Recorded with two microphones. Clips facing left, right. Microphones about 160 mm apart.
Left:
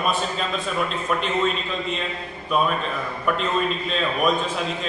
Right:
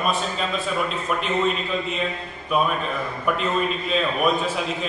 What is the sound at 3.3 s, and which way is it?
Speech, 5° right (ahead or behind).